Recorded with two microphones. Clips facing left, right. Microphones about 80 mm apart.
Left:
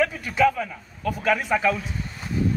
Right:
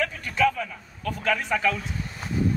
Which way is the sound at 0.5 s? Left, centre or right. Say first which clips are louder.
Left 3 dB; centre.